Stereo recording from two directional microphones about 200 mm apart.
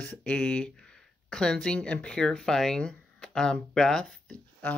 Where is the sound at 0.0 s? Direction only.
5° left (ahead or behind).